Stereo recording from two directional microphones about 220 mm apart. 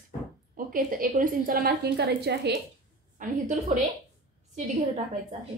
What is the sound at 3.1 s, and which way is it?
A woman's voice, 35° right (ahead or behind).